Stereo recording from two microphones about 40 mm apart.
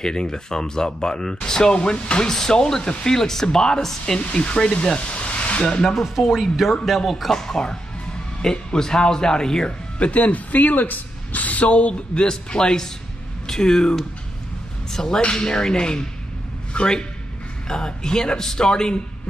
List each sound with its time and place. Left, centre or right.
0.0 s speech: centre
2.2 s speech: centre
3.2 s speech: centre
4.2 s speech: left
6.0 s speech: centre
7.3 s speech: centre
9.9 s a woman's voice: left; by 18.9 s centre